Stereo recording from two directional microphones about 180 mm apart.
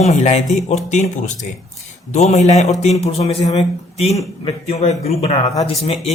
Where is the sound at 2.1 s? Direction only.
40° left (ahead or behind).